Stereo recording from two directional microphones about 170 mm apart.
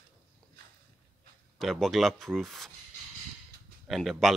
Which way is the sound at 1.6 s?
Centre (ahead or behind).